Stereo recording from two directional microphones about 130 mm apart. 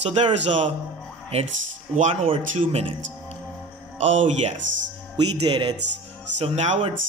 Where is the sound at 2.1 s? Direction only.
50° right (ahead or behind).